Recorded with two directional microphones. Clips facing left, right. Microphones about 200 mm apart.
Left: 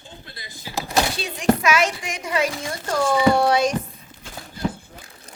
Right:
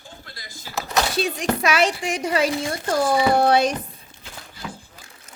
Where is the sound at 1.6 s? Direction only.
35° right (ahead or behind).